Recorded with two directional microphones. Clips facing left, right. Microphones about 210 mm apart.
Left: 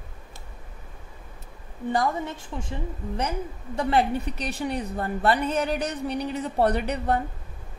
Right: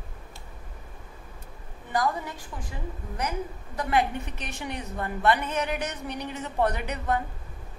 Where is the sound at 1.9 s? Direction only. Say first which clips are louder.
Left 2 dB; 25° left (ahead or behind).